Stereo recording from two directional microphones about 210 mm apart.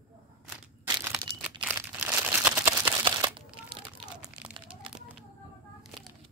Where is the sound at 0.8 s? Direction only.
20° right (ahead or behind).